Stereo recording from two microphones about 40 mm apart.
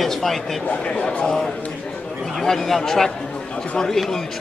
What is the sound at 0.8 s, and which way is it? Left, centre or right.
Speech, left.